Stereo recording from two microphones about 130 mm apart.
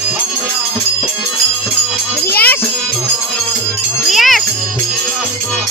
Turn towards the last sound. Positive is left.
turn(degrees=0)  # may be behind; listen again after turning